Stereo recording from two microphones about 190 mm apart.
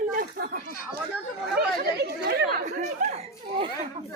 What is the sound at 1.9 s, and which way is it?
Chatter, 60° right (ahead or behind).